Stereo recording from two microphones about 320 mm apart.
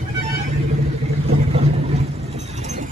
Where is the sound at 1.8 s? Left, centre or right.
Centre.